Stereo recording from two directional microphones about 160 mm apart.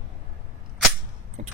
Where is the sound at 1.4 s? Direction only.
50° right (ahead or behind).